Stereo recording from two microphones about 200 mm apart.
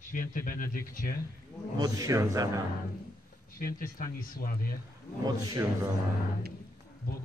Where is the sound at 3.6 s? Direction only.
45° left (ahead or behind).